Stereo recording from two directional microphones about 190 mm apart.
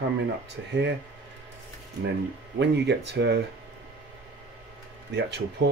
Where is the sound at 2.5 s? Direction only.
65° right (ahead or behind).